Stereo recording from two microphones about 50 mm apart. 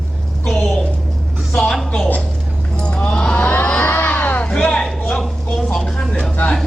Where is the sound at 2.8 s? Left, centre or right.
Left.